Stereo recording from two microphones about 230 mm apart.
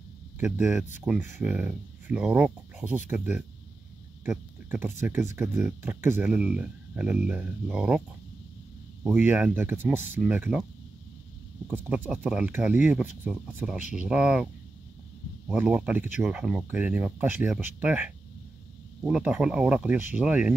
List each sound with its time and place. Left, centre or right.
0.4 s speech: centre
4.2 s speech: centre
9.0 s speech: centre
11.7 s speech: centre